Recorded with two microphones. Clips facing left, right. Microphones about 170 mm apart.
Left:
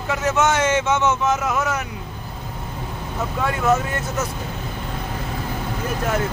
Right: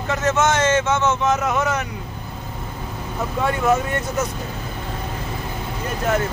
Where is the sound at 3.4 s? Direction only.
5° left (ahead or behind).